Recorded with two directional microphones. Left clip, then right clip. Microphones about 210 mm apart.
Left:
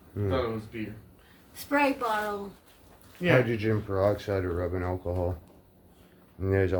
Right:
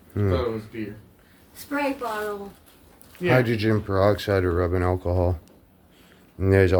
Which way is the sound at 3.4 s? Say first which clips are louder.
Right 5 dB; 50° right (ahead or behind).